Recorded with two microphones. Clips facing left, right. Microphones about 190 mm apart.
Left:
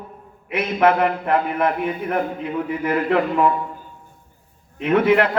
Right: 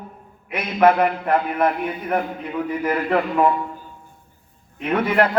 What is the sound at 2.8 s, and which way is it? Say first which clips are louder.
Speech: left 2 dB; 40° right (ahead or behind).